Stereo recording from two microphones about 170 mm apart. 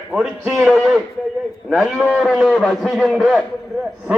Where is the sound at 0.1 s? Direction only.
5° right (ahead or behind).